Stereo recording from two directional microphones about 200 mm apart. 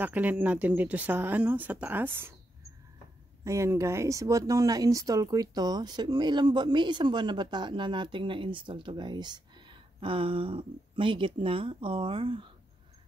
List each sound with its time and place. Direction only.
0.0 s speech: 10° right (ahead or behind)
3.4 s speech: 15° right (ahead or behind)